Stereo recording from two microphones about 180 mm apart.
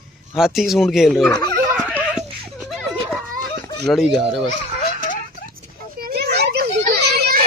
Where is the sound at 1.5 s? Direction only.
10° right (ahead or behind).